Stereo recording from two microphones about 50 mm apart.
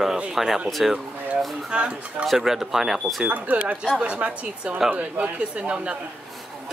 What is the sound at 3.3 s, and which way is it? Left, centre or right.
Speech, right.